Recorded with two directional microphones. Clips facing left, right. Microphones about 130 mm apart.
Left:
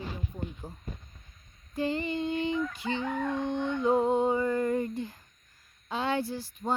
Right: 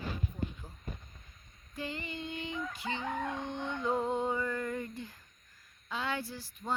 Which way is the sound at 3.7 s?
20° left (ahead or behind).